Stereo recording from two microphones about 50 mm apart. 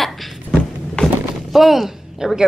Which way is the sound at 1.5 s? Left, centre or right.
Centre.